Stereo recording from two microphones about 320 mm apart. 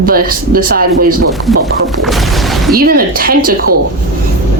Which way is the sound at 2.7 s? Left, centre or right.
Right.